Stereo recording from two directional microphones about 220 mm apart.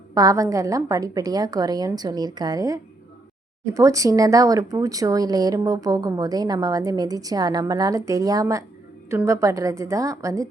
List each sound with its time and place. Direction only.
0.1 s speech: 15° right (ahead or behind)